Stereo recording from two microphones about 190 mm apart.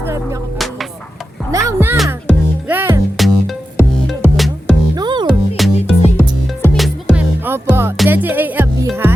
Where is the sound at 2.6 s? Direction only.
10° right (ahead or behind).